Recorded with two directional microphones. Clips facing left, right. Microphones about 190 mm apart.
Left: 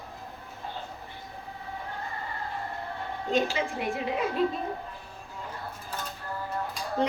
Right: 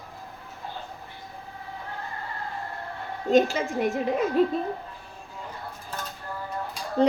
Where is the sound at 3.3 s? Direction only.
45° right (ahead or behind).